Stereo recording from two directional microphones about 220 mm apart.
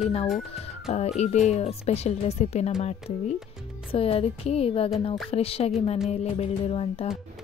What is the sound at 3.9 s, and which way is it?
Speech, 25° left (ahead or behind).